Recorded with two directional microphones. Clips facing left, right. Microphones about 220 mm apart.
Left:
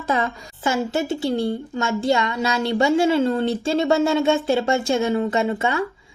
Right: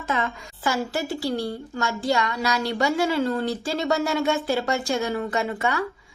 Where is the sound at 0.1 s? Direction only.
30° left (ahead or behind).